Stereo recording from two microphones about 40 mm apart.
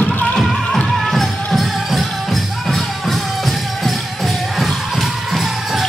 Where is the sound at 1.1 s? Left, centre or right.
Centre.